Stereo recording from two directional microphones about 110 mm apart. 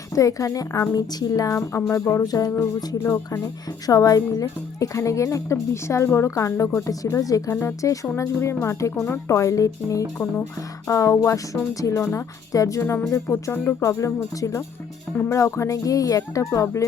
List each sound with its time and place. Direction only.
0.1 s a woman's voice: 30° left (ahead or behind)
1.9 s music: 25° left (ahead or behind)
11.8 s a woman's voice: 30° left (ahead or behind)
12.1 s music: 30° left (ahead or behind)